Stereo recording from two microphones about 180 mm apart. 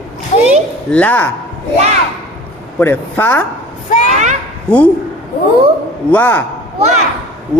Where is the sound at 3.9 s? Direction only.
45° left (ahead or behind).